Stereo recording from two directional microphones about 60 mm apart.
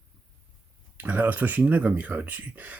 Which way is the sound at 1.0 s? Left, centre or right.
Right.